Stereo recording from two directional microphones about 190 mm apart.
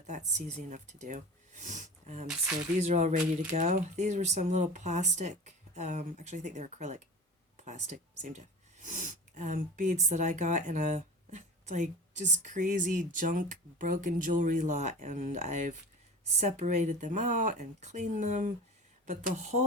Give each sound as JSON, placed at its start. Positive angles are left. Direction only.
{"t": 0.1, "sound": "speech", "side_deg": -40}